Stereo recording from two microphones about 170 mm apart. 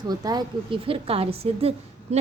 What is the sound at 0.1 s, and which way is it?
A woman's voice, 25° right (ahead or behind).